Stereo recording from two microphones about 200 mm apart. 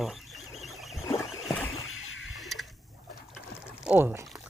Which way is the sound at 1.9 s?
80° left.